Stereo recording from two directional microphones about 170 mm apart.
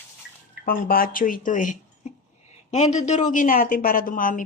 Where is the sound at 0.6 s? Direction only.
55° left (ahead or behind).